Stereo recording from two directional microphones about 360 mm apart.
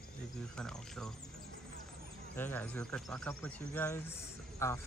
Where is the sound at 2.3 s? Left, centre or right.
Centre.